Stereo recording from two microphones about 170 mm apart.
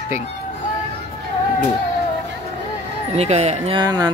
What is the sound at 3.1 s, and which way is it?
Speech, 40° right (ahead or behind).